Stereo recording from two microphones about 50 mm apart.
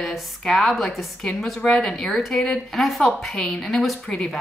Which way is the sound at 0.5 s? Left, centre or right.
Centre.